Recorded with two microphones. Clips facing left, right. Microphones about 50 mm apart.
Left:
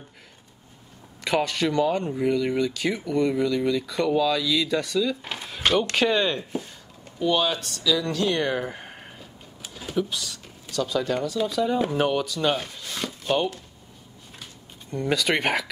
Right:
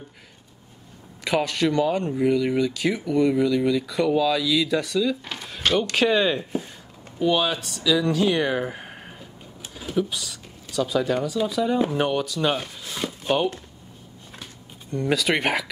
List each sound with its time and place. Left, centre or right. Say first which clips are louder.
1.2 s speech: right 1 dB; centre
5.3 s drawer open or close: left 1 dB; centre
5.9 s speech: right 2 dB; centre
14.9 s speech: right 1 dB; centre